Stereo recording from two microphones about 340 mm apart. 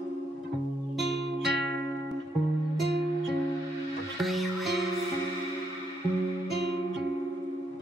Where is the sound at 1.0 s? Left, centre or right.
Right.